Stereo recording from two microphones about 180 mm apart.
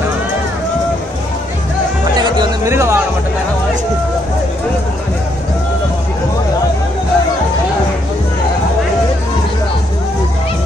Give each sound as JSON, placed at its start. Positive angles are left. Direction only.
{"t": 2.1, "sound": "music", "side_deg": -15}